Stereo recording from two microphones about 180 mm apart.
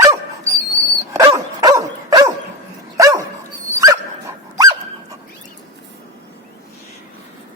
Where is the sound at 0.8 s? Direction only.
15° right (ahead or behind).